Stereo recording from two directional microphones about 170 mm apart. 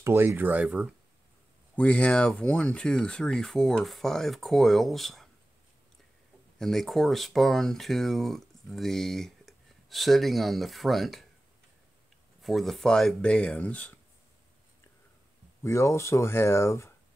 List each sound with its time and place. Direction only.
0.0 s speech: 15° right (ahead or behind)
1.8 s speech: 5° left (ahead or behind)
6.6 s speech: centre (ahead or behind)
12.4 s speech: centre (ahead or behind)
15.6 s speech: 15° left (ahead or behind)